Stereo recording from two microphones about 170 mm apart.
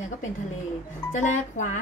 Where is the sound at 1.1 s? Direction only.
50° left (ahead or behind).